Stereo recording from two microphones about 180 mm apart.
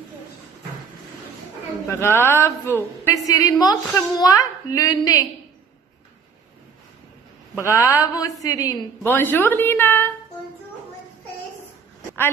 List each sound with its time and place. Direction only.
1.9 s a woman's voice: 15° left (ahead or behind)
7.6 s a woman's voice: 15° left (ahead or behind)